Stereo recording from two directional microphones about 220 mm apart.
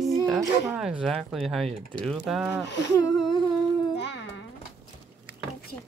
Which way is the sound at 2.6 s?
50° left (ahead or behind).